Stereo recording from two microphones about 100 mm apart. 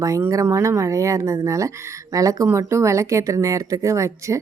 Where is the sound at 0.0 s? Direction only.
30° right (ahead or behind).